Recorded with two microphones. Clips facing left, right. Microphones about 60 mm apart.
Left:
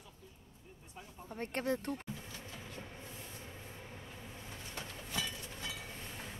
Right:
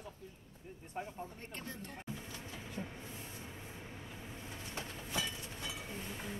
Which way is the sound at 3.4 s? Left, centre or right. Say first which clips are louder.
Right 1 dB; centre.